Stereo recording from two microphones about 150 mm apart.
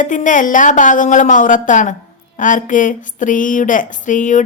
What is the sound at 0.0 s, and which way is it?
Speech, 60° left (ahead or behind).